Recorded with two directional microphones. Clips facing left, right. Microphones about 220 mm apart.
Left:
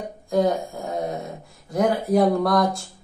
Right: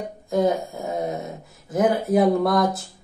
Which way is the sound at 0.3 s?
Centre (ahead or behind).